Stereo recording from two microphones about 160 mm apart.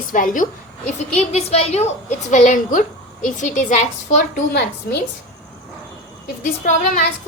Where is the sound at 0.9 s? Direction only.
45° left (ahead or behind).